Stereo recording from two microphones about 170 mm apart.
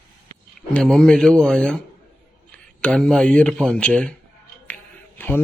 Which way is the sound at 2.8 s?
5° left (ahead or behind).